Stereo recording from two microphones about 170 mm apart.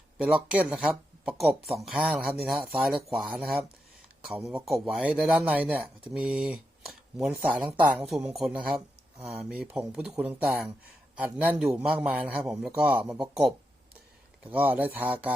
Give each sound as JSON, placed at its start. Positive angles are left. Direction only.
{"t": 0.2, "sound": "a man's voice", "side_deg": -5}
{"t": 9.1, "sound": "speech", "side_deg": -35}
{"t": 9.6, "sound": "a man's voice", "side_deg": -5}
{"t": 14.5, "sound": "a man's voice", "side_deg": -10}